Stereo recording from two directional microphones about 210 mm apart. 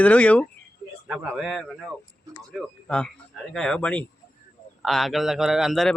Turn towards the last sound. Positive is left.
turn(degrees=0)  # may be behind; listen again after turning